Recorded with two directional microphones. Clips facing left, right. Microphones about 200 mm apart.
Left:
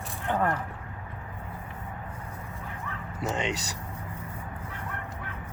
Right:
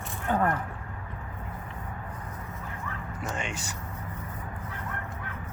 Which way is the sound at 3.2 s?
20° left (ahead or behind).